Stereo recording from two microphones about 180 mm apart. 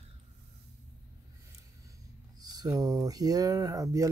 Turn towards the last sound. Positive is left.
turn(degrees=-20)  # may be behind; listen again after turning